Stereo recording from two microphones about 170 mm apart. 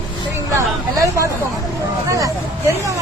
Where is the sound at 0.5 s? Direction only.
20° right (ahead or behind).